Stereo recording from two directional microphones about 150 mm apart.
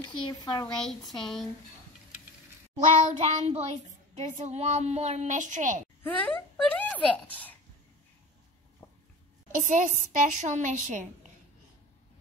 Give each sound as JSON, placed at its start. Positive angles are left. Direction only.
{"t": 0.0, "sound": "speech", "side_deg": 30}
{"t": 0.8, "sound": "a child's voice", "side_deg": 0}
{"t": 3.0, "sound": "speech", "side_deg": -45}
{"t": 6.0, "sound": "a woman's voice", "side_deg": 10}
{"t": 9.6, "sound": "a woman's voice", "side_deg": -55}